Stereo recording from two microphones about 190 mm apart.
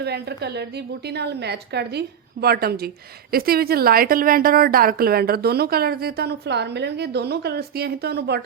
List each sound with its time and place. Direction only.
0.0 s a woman's voice: 60° right (ahead or behind)